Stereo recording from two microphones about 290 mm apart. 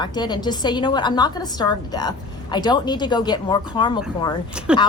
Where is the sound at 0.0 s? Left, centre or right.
Centre.